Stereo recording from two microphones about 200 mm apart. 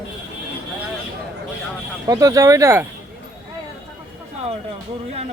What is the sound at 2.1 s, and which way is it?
Speech, 15° right (ahead or behind).